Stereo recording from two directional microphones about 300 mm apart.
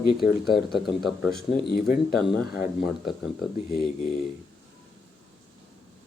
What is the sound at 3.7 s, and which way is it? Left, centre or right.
Speech, left.